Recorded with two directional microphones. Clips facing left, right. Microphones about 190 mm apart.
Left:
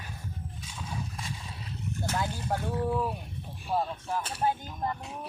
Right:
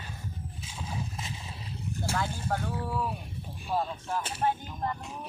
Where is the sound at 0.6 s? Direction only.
25° right (ahead or behind).